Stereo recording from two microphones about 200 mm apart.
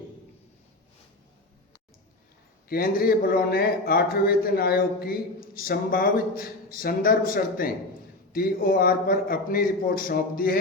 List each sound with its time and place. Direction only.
2.6 s speech: 50° left (ahead or behind)